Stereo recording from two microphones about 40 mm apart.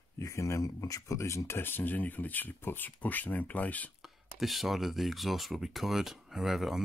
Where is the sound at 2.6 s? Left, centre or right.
Left.